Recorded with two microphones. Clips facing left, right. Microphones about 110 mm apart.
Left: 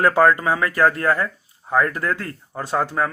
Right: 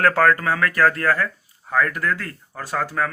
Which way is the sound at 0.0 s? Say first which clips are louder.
Left 2 dB; 15° left (ahead or behind).